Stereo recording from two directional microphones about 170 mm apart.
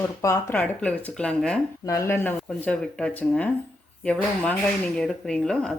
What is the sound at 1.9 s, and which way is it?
Speech, 15° left (ahead or behind).